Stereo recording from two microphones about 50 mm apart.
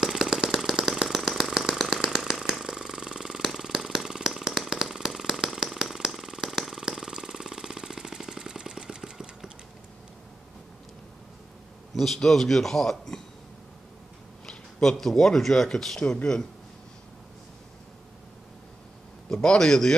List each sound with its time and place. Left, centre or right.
0.0 s engine: centre
2.6 s water: centre
11.9 s a man's voice: centre
14.4 s a man's voice: centre
19.3 s a man's voice: centre